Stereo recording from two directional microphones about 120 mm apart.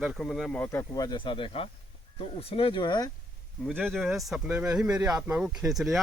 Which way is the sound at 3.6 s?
5° left (ahead or behind).